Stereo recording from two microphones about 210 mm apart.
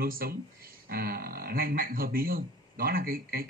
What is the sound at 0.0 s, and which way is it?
A man's voice, 45° right (ahead or behind).